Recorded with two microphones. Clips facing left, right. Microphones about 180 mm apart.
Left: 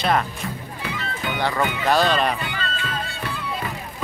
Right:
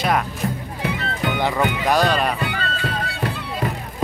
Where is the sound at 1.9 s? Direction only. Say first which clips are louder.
Even; 10° right (ahead or behind).